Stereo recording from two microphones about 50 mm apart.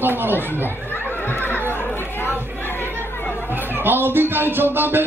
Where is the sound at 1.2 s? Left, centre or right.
Left.